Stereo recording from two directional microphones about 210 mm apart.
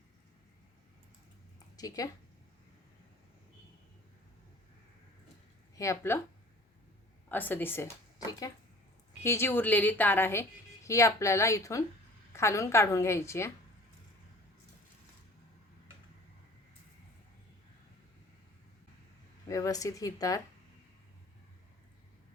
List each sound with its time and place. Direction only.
1.7 s speech: 15° left (ahead or behind)
5.7 s speech: 15° left (ahead or behind)
7.3 s speech: 10° left (ahead or behind)
19.5 s speech: 15° left (ahead or behind)